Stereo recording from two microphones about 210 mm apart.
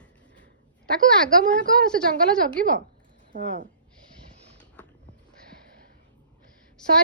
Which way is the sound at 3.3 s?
40° right (ahead or behind).